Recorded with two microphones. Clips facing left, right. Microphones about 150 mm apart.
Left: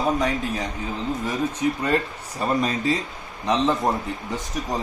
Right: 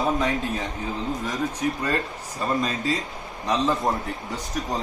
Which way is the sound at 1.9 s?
25° left (ahead or behind).